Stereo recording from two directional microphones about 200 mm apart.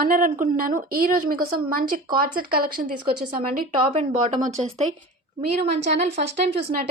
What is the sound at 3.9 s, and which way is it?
Speech, 25° right (ahead or behind).